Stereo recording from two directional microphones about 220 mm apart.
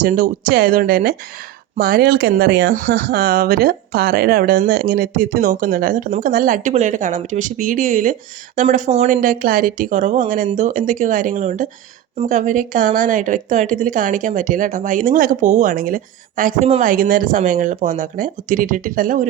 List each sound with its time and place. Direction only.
0.0 s a woman's voice: 35° right (ahead or behind)